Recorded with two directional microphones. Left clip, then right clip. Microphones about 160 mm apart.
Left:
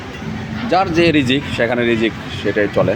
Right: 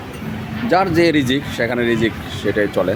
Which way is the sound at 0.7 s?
30° right (ahead or behind).